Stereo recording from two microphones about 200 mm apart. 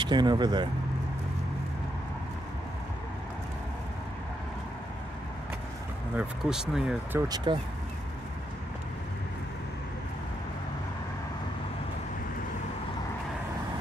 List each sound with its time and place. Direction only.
0.0 s speech: 20° right (ahead or behind)
6.1 s speech: 5° right (ahead or behind); by 7.5 s 20° right (ahead or behind)